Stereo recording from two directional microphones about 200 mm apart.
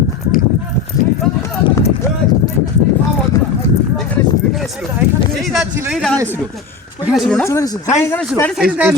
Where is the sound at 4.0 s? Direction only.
Centre (ahead or behind).